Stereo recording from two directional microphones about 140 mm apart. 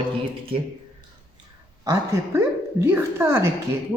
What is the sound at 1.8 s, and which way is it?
Speech, 25° right (ahead or behind).